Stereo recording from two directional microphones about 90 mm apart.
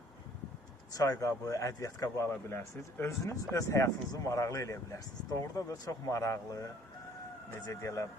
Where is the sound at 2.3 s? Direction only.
25° left (ahead or behind).